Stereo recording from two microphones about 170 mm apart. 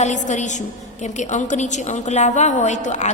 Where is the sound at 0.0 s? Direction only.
45° left (ahead or behind).